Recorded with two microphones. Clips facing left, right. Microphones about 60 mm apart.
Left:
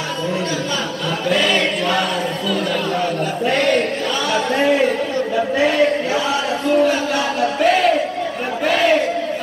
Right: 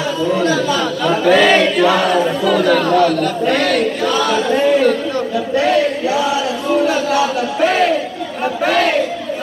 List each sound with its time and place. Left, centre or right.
1.0 s speech: right
2.5 s speech: right
4.3 s speech: centre